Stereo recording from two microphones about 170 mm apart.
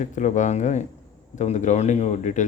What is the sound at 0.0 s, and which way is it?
Speech, 45° left (ahead or behind).